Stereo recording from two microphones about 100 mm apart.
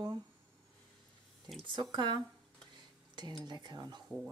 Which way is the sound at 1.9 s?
50° right (ahead or behind).